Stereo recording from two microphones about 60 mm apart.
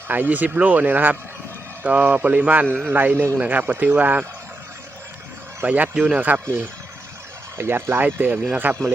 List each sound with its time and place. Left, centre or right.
0.1 s speech: right
5.6 s speech: right
7.6 s speech: right